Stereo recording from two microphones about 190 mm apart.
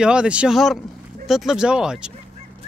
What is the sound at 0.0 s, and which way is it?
Speech, 5° right (ahead or behind).